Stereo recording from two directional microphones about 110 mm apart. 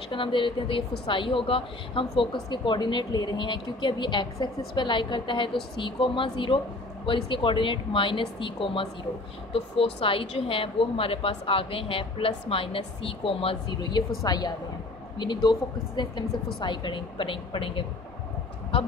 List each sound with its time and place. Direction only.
0.1 s a woman's voice: 50° left (ahead or behind)
13.7 s a woman's voice: 40° left (ahead or behind)